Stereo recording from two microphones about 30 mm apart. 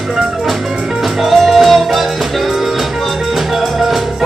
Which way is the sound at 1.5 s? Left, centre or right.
Centre.